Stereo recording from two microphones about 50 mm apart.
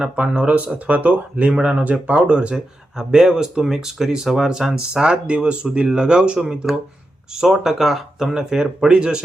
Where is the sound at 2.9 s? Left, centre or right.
Centre.